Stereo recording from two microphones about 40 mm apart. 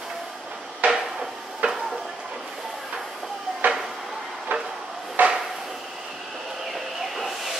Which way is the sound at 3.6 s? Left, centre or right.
Right.